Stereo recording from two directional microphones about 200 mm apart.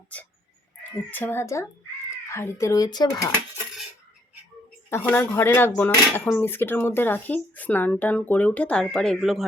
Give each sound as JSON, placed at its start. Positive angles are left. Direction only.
{"t": 1.1, "sound": "speech", "side_deg": 10}
{"t": 4.9, "sound": "speech", "side_deg": 10}